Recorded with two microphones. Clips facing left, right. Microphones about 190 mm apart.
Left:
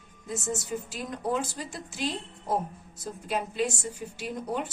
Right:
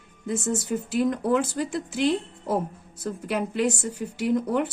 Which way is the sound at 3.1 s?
65° right (ahead or behind).